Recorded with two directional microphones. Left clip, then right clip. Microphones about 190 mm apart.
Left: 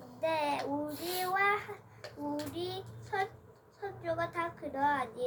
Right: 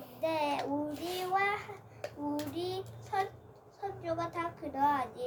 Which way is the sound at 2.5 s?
10° left (ahead or behind).